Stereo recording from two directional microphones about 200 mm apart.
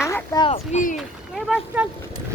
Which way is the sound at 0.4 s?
35° left (ahead or behind).